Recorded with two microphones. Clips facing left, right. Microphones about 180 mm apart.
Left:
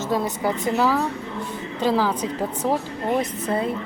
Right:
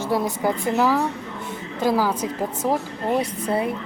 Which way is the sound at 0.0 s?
10° right (ahead or behind).